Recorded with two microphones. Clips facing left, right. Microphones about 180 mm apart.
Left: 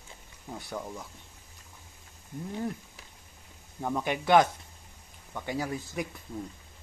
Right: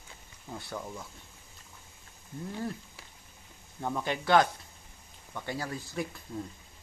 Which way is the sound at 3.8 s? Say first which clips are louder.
Left 2 dB; 15° left (ahead or behind).